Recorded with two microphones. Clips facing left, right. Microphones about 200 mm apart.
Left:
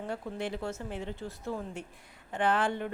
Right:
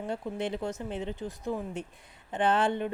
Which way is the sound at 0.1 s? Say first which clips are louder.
Right 3 dB; 20° right (ahead or behind).